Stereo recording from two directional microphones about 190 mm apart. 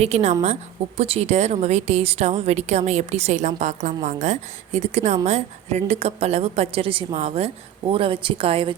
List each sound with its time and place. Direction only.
0.0 s speech: 35° right (ahead or behind)